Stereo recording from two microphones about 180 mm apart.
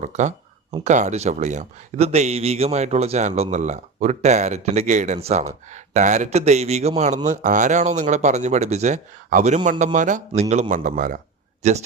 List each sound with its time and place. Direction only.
0.0 s speech: 40° right (ahead or behind)